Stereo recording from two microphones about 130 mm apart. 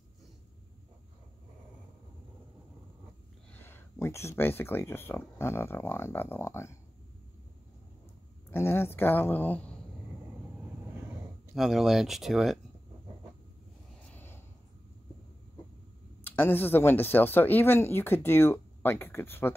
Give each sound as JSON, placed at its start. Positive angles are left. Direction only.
{"t": 3.5, "sound": "speech", "side_deg": 15}
{"t": 8.5, "sound": "speech", "side_deg": 20}
{"t": 11.5, "sound": "speech", "side_deg": 0}
{"t": 14.0, "sound": "a sound", "side_deg": 15}
{"t": 16.3, "sound": "speech", "side_deg": 15}